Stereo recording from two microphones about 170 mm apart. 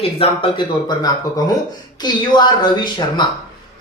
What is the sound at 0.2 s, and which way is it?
Speech, 25° left (ahead or behind).